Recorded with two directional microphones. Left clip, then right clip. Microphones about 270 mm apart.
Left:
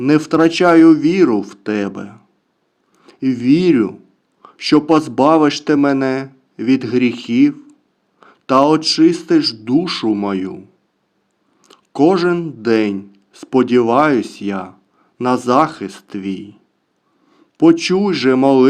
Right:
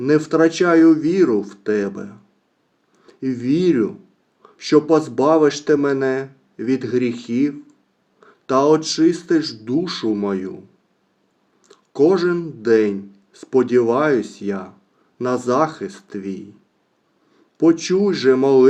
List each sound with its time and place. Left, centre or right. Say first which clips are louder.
0.0 s speech: left 2 dB; left
11.6 s a man's voice: left 2 dB; left